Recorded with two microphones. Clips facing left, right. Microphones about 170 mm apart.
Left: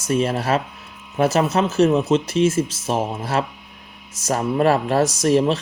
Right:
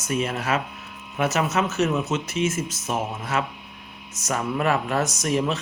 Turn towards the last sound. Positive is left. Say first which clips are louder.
# left 7 dB
turn(degrees=30)  # may be behind; listen again after turning